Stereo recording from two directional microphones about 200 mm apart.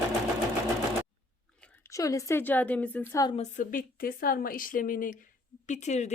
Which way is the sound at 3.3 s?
40° left (ahead or behind).